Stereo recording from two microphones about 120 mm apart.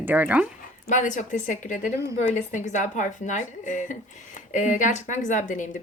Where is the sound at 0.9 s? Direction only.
90° left.